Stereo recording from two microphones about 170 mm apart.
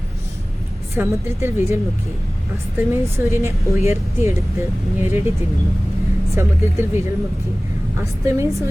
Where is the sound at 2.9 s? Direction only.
15° right (ahead or behind).